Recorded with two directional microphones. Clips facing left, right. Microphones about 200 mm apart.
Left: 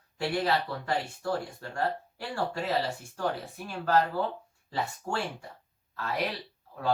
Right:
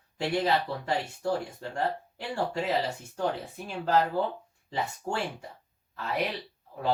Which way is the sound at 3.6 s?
20° right (ahead or behind).